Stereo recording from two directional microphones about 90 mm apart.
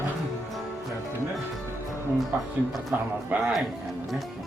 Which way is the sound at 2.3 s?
25° right (ahead or behind).